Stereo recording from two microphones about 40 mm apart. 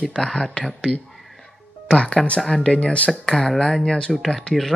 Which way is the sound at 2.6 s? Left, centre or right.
Centre.